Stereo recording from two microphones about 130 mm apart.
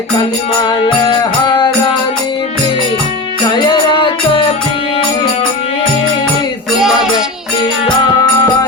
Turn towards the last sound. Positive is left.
turn(degrees=-5)  # may be behind; listen again after turning